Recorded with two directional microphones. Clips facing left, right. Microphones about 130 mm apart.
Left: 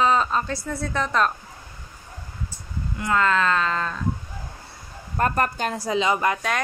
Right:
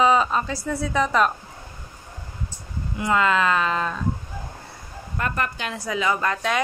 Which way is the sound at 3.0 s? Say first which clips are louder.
Right 1 dB; 10° right (ahead or behind).